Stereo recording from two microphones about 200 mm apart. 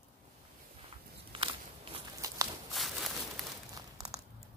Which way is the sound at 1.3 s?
25° right (ahead or behind).